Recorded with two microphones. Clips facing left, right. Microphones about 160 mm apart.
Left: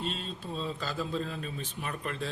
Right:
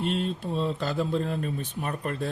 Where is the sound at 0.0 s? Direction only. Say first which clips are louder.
Right 8 dB; 60° right (ahead or behind).